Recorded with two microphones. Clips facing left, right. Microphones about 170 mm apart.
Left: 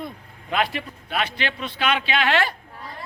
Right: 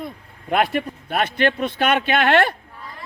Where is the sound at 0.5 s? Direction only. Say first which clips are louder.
Right 5 dB; 50° right (ahead or behind).